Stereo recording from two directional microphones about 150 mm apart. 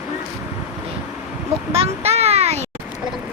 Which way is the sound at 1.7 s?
45° right (ahead or behind).